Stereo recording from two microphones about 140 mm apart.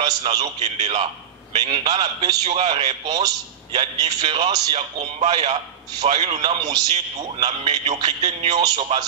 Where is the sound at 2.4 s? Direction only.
45° right (ahead or behind).